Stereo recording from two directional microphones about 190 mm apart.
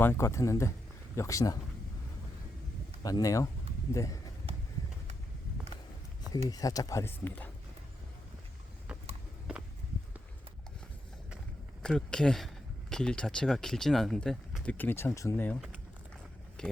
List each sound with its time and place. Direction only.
0.0 s speech: 15° left (ahead or behind)
3.0 s speech: 20° left (ahead or behind)
6.5 s speech: 20° left (ahead or behind)
11.8 s speech: 5° left (ahead or behind)
16.6 s speech: 5° left (ahead or behind)